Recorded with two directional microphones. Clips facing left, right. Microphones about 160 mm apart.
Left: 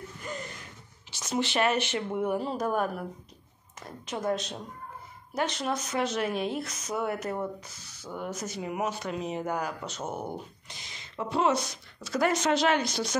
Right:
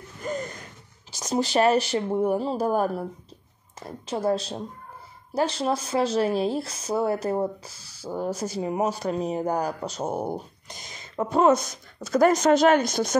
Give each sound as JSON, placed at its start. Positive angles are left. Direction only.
{"t": 0.2, "sound": "gasp", "side_deg": -45}
{"t": 1.1, "sound": "speech", "side_deg": -40}